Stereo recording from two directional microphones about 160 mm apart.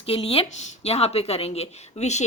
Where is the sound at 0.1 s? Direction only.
35° left (ahead or behind).